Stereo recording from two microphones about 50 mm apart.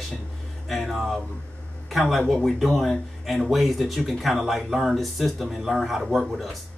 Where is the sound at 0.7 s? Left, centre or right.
Centre.